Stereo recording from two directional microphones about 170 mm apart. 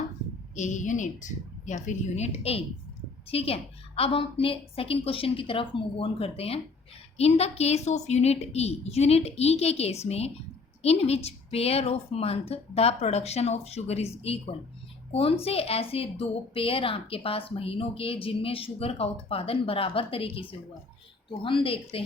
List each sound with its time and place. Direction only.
0.5 s a woman's voice: 45° left (ahead or behind)